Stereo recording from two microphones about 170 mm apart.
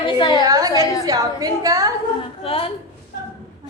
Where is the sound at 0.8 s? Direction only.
20° left (ahead or behind).